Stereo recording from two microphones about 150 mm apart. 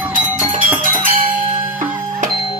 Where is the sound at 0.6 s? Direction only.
70° right (ahead or behind).